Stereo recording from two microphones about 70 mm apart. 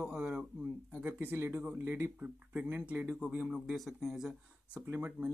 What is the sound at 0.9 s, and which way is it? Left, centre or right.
Speech, right.